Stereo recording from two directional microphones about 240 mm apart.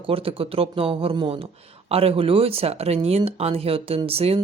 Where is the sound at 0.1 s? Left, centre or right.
Right.